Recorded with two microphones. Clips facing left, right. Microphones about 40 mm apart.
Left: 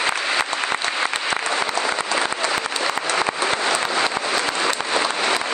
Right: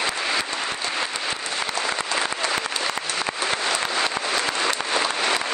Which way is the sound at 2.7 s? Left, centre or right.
Left.